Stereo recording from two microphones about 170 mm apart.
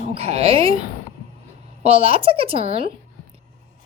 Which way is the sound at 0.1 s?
35° right (ahead or behind).